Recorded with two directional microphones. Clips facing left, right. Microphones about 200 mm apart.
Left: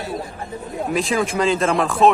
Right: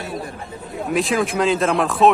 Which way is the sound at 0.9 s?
Centre (ahead or behind).